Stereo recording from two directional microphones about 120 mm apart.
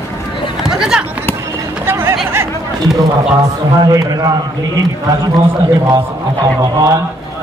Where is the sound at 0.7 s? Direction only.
5° right (ahead or behind).